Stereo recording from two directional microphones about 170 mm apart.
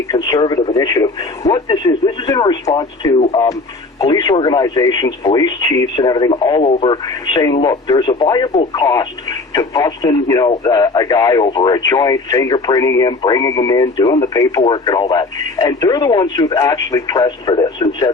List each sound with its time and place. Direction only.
0.1 s speech: 25° left (ahead or behind)
6.6 s speech: 40° left (ahead or behind)
6.8 s speech: 25° left (ahead or behind)